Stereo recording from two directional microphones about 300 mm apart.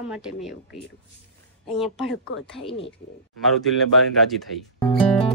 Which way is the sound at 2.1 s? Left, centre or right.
Left.